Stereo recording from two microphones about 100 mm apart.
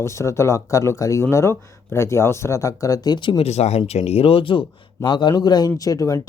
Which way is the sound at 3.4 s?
90° left.